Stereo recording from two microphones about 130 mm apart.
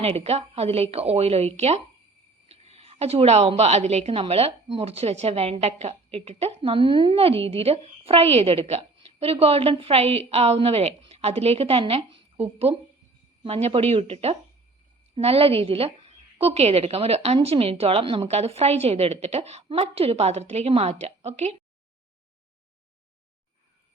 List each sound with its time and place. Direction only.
0.0 s a woman's voice: 50° right (ahead or behind)